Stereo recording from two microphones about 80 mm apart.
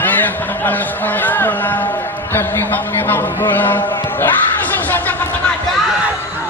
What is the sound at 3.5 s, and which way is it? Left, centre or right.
Speech, left.